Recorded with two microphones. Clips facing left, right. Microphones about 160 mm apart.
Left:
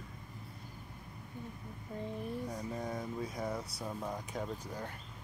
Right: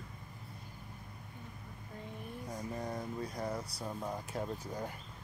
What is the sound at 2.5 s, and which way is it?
Speech, centre (ahead or behind).